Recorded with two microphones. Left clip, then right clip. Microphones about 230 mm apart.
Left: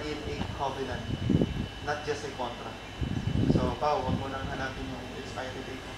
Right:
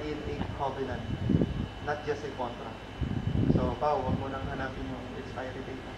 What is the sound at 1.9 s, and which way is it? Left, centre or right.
Speech, centre.